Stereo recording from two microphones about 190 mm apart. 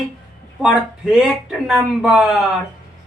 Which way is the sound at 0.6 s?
Centre (ahead or behind).